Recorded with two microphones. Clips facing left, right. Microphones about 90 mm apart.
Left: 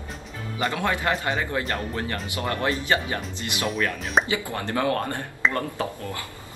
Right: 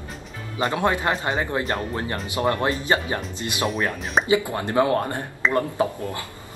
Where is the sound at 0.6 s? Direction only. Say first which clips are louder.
Right 3 dB; 25° right (ahead or behind).